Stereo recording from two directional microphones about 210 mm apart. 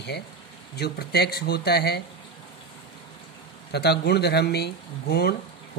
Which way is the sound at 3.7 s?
50° left (ahead or behind).